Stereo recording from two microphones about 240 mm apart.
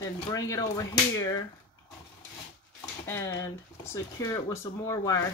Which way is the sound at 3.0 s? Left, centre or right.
Centre.